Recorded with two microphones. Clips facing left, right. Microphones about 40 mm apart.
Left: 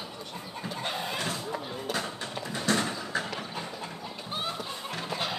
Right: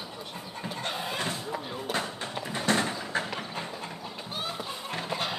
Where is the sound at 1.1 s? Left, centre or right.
Right.